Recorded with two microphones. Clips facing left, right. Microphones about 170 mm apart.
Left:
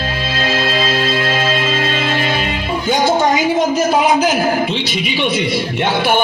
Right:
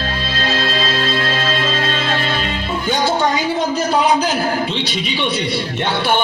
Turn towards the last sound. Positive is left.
turn(degrees=10)  # may be behind; listen again after turning